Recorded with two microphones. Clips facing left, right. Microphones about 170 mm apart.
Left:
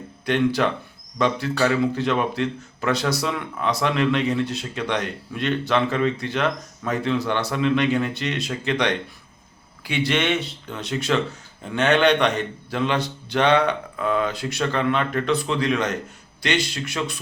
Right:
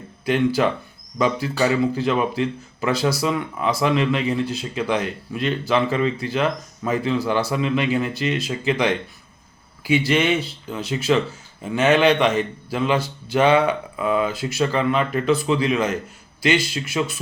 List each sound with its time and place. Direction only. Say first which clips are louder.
0.3 s speech: right 1 dB; 5° right (ahead or behind)